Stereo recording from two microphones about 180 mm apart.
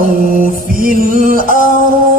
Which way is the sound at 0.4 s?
50° right (ahead or behind).